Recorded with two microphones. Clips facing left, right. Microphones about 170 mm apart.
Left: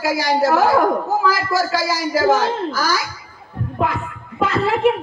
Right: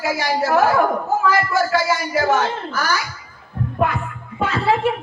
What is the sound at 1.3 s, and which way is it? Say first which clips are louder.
A woman's voice: right 1 dB; 90° left.